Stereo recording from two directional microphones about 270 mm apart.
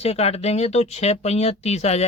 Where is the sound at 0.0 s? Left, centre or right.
Left.